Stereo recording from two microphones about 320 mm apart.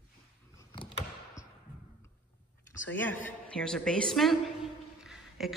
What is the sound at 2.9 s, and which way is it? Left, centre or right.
A woman's voice, centre.